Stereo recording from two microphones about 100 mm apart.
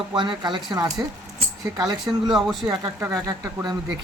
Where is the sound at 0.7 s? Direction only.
40° right (ahead or behind).